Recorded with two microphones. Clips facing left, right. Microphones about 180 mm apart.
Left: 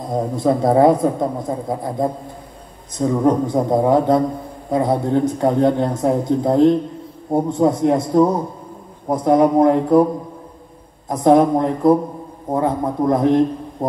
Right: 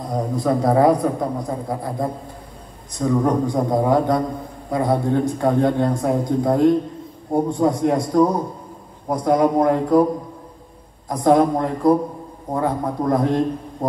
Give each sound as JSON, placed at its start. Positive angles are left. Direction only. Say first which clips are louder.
{"t": 0.1, "sound": "a man's voice", "louder": "left 3 dB", "side_deg": 25}
{"t": 11.1, "sound": "a man's voice", "louder": "left 3 dB", "side_deg": 20}